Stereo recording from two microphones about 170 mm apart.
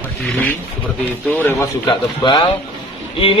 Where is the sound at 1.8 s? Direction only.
30° left (ahead or behind).